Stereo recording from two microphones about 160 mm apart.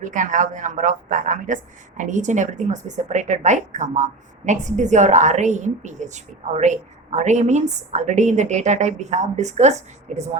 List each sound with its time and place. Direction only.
0.0 s a woman's voice: 55° right (ahead or behind)